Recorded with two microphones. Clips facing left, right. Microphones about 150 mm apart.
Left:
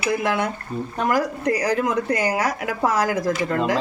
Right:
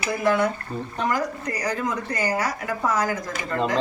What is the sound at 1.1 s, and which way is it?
Speech, 65° left (ahead or behind).